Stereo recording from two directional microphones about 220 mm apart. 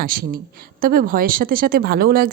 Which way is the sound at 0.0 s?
40° right (ahead or behind).